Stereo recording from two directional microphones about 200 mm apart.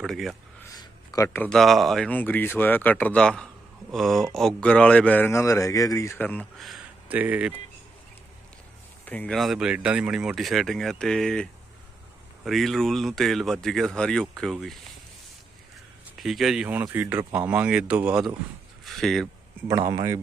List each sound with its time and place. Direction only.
0.0 s speech: centre (ahead or behind)
0.6 s speech: 15° left (ahead or behind); by 7.5 s 5° right (ahead or behind)
9.0 s speech: 5° left (ahead or behind)
12.5 s speech: centre (ahead or behind)
16.1 s speech: centre (ahead or behind)
19.9 s speech: 15° right (ahead or behind)